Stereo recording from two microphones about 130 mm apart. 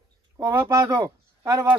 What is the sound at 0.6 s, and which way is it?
Speech, 30° right (ahead or behind).